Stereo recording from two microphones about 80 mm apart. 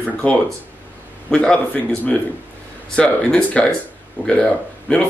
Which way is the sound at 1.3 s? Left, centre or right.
Centre.